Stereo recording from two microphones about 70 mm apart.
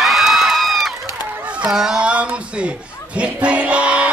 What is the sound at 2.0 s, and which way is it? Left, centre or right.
Speech, centre.